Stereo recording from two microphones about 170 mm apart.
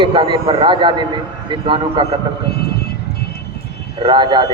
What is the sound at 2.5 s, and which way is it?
Vehicle, 70° left (ahead or behind).